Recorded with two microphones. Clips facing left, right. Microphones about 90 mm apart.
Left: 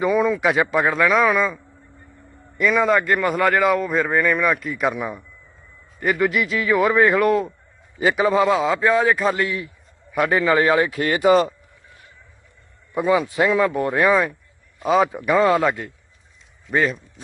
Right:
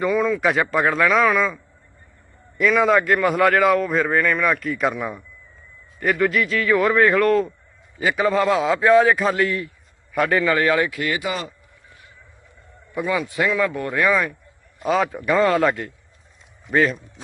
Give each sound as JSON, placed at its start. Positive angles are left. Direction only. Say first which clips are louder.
{"t": 0.1, "sound": "a man's voice", "louder": "left 1 dB", "side_deg": 15}
{"t": 0.4, "sound": "a man's voice", "louder": "left 1 dB", "side_deg": 5}
{"t": 2.6, "sound": "a man's voice", "louder": "right 1 dB", "side_deg": 0}
{"t": 10.1, "sound": "a man's voice", "louder": "left 1 dB", "side_deg": 15}
{"t": 12.9, "sound": "a man's voice", "louder": "left 4 dB", "side_deg": 25}
{"t": 14.8, "sound": "a man's voice", "louder": "left 3 dB", "side_deg": 0}